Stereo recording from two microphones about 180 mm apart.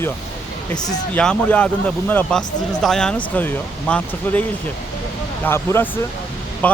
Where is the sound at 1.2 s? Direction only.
5° left (ahead or behind).